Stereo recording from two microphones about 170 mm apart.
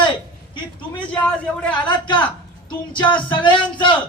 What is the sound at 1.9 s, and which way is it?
A man's voice, 25° left (ahead or behind).